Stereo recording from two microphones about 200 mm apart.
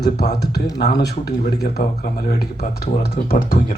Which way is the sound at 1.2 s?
55° left (ahead or behind).